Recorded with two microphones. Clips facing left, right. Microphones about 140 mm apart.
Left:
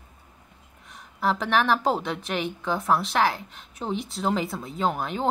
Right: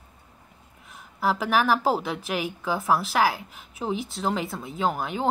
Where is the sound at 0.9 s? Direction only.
5° right (ahead or behind).